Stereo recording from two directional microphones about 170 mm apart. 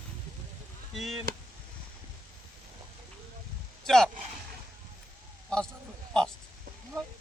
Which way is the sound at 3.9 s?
Centre (ahead or behind).